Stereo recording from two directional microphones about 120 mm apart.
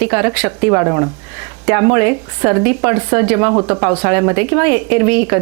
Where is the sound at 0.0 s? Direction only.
20° right (ahead or behind).